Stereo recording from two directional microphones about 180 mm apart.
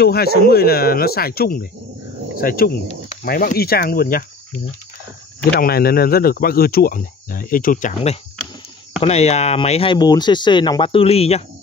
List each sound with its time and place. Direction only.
0.0 s speech: 60° left (ahead or behind)
5.5 s speech: 60° left (ahead or behind)
9.0 s speech: 35° left (ahead or behind)